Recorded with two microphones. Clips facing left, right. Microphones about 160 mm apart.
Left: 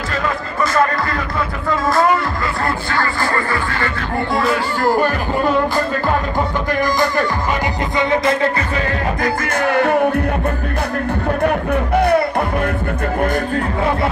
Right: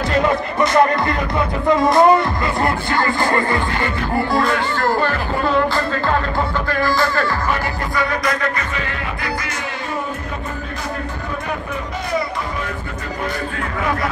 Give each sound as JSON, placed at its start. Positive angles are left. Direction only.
{"t": 0.1, "sound": "speech", "side_deg": -20}
{"t": 1.8, "sound": "music", "side_deg": -20}
{"t": 4.3, "sound": "speech", "side_deg": 0}
{"t": 4.8, "sound": "speech", "side_deg": 15}
{"t": 6.7, "sound": "speech", "side_deg": 15}
{"t": 7.9, "sound": "music", "side_deg": 25}
{"t": 9.2, "sound": "music", "side_deg": 55}
{"t": 11.4, "sound": "music", "side_deg": 60}